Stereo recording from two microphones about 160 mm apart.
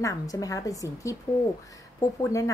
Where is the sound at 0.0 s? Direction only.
20° left (ahead or behind).